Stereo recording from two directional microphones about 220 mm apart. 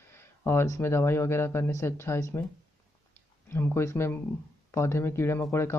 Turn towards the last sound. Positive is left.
turn(degrees=10)  # may be behind; listen again after turning